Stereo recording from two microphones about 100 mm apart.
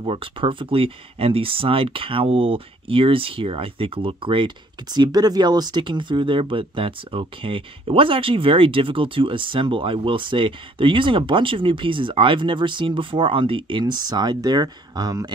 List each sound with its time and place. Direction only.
0.0 s speech: 60° right (ahead or behind)
4.9 s speech: 45° right (ahead or behind)